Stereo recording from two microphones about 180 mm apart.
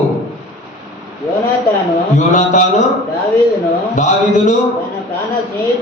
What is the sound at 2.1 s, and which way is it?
Speech, 45° left (ahead or behind).